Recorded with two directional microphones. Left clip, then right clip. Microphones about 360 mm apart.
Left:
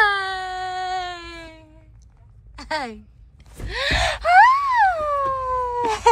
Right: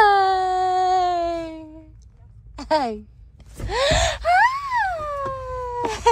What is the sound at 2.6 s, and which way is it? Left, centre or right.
Speech, centre.